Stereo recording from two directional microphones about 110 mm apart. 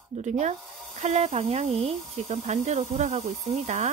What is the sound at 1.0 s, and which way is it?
Speech, 80° right.